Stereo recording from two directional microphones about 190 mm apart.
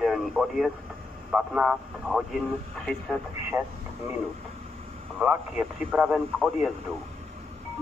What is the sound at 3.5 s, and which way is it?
Speech, 10° right (ahead or behind).